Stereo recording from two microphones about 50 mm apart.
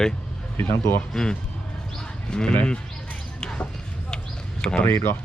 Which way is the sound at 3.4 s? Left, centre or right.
Centre.